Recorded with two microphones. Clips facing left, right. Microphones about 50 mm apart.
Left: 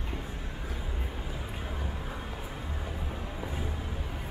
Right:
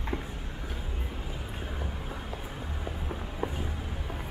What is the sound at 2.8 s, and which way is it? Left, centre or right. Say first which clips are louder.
Music: right 1 dB; centre.